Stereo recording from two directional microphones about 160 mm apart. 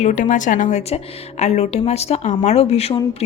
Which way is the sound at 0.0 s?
50° left (ahead or behind).